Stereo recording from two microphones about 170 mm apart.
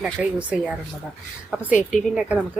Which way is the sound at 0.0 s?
5° right (ahead or behind).